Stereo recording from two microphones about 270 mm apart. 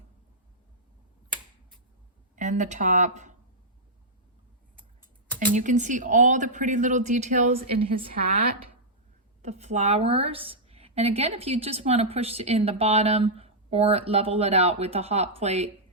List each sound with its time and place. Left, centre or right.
2.3 s speech: right
5.5 s a woman's voice: right
9.4 s a woman's voice: right